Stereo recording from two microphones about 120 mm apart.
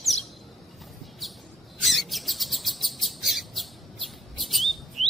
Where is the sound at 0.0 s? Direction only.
Centre (ahead or behind).